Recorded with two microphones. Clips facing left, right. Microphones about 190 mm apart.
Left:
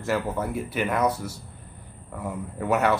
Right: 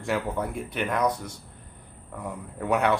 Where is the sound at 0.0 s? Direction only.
Centre (ahead or behind).